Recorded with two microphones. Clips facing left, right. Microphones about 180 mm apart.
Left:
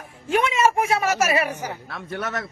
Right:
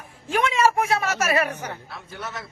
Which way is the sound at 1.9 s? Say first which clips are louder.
Left 6 dB; 65° left (ahead or behind).